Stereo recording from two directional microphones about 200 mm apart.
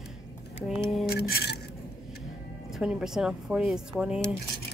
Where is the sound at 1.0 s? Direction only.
50° left (ahead or behind).